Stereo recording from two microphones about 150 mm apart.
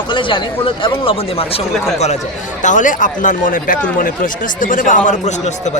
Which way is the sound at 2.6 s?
60° left (ahead or behind).